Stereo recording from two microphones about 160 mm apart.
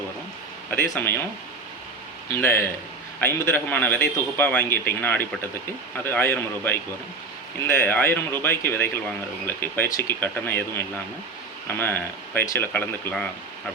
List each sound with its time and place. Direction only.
0.7 s a man's voice: 10° left (ahead or behind)
2.3 s a man's voice: 15° left (ahead or behind)